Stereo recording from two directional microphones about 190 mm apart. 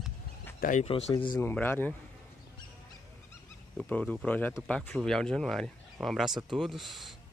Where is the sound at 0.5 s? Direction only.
45° left (ahead or behind).